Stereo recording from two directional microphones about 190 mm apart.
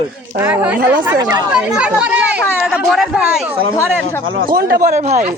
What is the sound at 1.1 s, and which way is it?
Speech, 20° right (ahead or behind).